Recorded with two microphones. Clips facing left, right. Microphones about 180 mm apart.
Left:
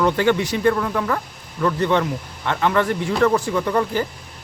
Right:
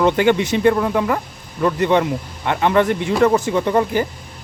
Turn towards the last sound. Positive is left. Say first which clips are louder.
# right 3 dB
turn(degrees=-20)  # may be behind; listen again after turning